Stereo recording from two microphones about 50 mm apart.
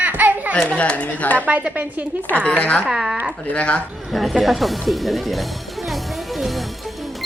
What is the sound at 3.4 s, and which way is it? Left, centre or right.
Speech, left.